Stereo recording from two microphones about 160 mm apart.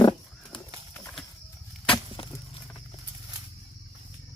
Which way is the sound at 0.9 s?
10° left (ahead or behind).